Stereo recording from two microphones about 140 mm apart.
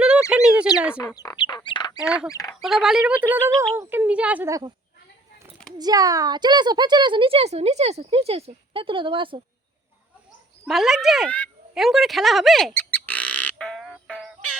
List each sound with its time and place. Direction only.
0.3 s bird: 5° right (ahead or behind)
1.0 s speech: 25° left (ahead or behind)
2.0 s speech: 10° right (ahead or behind)
2.3 s speech: 25° left (ahead or behind)
2.6 s speech: centre (ahead or behind)
4.4 s speech: 25° right (ahead or behind)
5.7 s speech: 25° right (ahead or behind)
10.7 s speech: centre (ahead or behind)
13.1 s frog: 10° left (ahead or behind)